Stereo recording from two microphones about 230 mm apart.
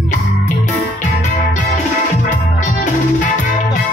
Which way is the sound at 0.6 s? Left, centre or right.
Left.